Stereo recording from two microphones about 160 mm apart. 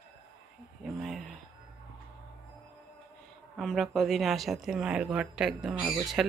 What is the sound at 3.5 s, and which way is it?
Speech, centre (ahead or behind).